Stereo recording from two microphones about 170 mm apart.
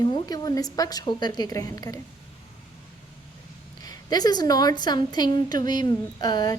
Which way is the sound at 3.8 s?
25° left (ahead or behind).